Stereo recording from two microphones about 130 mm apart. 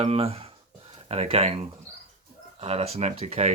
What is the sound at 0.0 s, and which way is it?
Speech, 50° right (ahead or behind).